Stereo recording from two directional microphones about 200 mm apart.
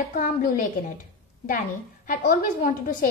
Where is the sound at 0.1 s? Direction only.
45° left (ahead or behind).